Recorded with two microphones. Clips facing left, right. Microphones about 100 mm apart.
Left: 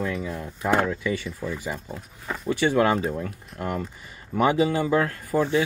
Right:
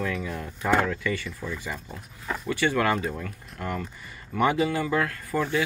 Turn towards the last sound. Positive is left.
turn(degrees=25)  # may be behind; listen again after turning